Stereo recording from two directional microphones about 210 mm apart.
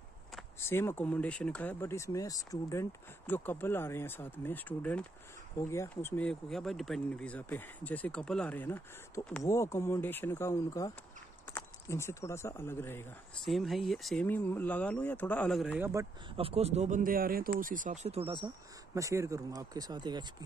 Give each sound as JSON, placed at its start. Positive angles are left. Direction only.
{"t": 0.6, "sound": "speech", "side_deg": 10}
{"t": 13.5, "sound": "speech", "side_deg": 0}
{"t": 16.3, "sound": "speech", "side_deg": -30}